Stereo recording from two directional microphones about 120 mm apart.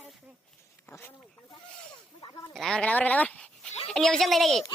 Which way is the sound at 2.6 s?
5° left (ahead or behind).